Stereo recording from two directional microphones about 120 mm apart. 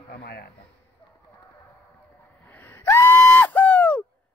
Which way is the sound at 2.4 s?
20° left (ahead or behind).